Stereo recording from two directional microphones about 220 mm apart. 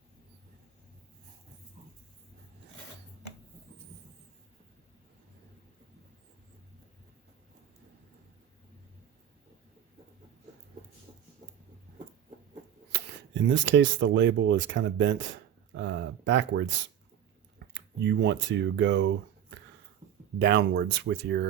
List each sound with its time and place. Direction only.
12.9 s speech: 55° right (ahead or behind)
15.7 s a sound: 55° right (ahead or behind)
17.7 s speech: 50° right (ahead or behind)
20.4 s speech: 50° right (ahead or behind)